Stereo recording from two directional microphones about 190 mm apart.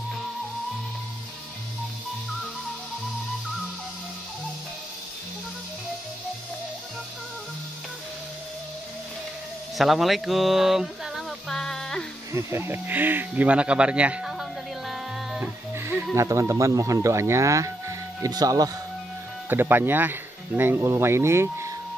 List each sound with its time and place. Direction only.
9.8 s a sound: centre (ahead or behind)
12.4 s speech: 15° right (ahead or behind)
15.7 s music: 15° right (ahead or behind)
16.2 s speech: 15° right (ahead or behind)